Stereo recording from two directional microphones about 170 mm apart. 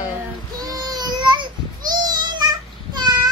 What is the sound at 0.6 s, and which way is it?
Child singing, 25° right (ahead or behind).